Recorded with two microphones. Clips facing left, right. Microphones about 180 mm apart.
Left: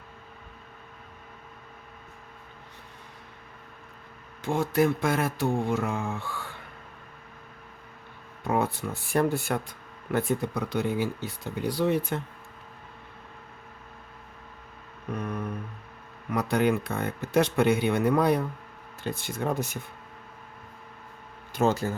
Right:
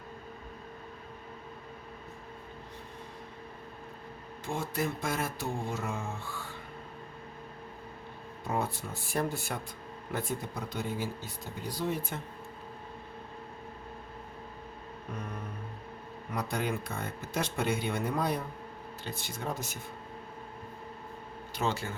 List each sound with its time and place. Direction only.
4.4 s speech: 70° left (ahead or behind)
8.4 s speech: 65° left (ahead or behind)
16.3 s speech: 70° left (ahead or behind)
19.0 s speech: 55° left (ahead or behind)
21.5 s speech: 45° left (ahead or behind)